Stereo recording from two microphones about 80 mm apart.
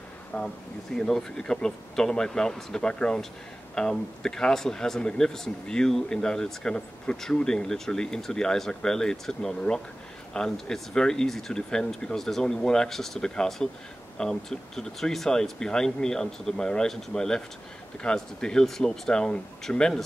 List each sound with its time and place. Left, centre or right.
0.3 s speech: centre
0.9 s speech: centre